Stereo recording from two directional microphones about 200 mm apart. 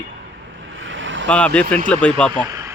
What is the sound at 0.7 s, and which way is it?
Vehicle, 75° right (ahead or behind).